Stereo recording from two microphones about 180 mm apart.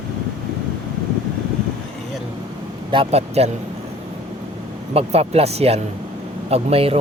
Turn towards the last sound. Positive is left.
turn(degrees=-35)  # may be behind; listen again after turning